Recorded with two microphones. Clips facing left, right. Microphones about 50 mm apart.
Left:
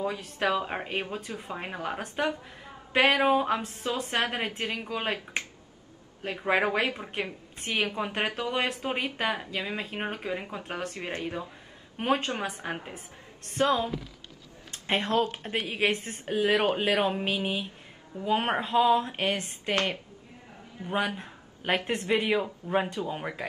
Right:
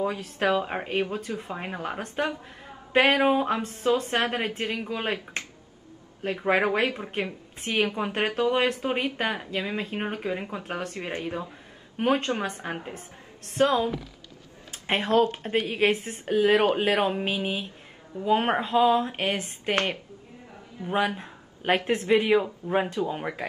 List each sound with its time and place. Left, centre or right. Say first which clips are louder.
0.2 s a woman's voice: right 3 dB; centre
6.4 s speech: right 2 dB; centre
12.0 s speech: right 3 dB; centre
14.7 s a sound: right 3 dB; centre
15.5 s speech: right 3 dB; centre
19.7 s a woman's voice: right 2 dB; right
20.8 s speech: right 3 dB; centre